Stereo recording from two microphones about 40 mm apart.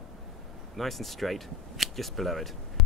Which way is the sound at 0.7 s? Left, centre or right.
Centre.